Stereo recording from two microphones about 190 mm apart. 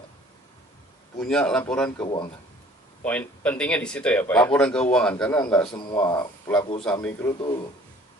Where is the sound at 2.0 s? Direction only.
25° left (ahead or behind).